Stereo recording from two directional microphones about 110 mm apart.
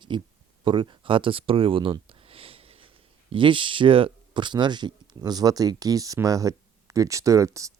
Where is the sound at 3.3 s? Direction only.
50° right (ahead or behind).